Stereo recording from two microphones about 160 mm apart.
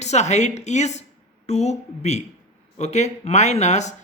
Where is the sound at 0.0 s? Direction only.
45° left (ahead or behind).